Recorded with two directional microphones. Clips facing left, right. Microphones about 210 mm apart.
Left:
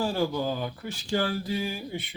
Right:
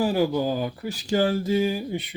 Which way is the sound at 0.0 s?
15° right (ahead or behind).